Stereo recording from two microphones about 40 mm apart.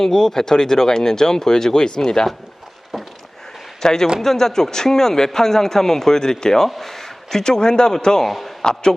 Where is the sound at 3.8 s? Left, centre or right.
Centre.